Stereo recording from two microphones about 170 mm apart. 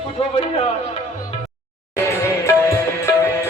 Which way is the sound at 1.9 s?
15° left (ahead or behind).